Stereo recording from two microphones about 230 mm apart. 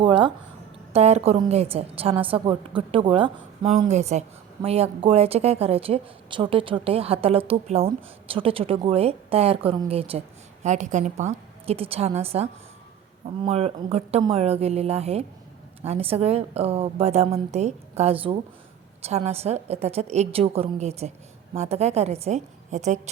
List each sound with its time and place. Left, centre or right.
0.0 s a woman's voice: right